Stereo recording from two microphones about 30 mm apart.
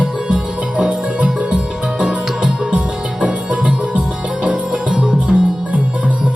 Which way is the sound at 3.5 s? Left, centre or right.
Right.